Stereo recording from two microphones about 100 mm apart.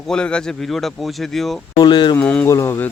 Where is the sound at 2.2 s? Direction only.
15° left (ahead or behind).